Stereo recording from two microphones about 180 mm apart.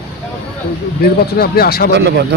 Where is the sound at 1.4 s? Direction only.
60° left (ahead or behind).